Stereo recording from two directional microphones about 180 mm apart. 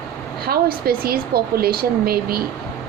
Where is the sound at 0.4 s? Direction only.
55° right (ahead or behind).